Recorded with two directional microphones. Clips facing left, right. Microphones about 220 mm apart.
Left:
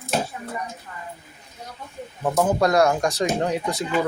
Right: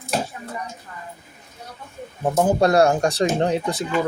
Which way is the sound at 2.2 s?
25° right (ahead or behind).